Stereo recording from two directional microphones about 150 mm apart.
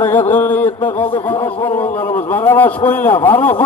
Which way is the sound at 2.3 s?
10° left (ahead or behind).